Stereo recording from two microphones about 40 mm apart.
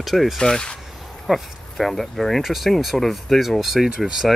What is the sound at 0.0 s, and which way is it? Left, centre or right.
Speech, centre.